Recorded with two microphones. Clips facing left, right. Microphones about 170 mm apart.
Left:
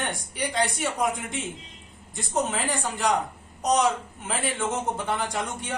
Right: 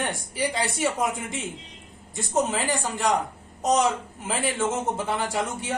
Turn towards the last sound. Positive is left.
turn(degrees=-5)  # may be behind; listen again after turning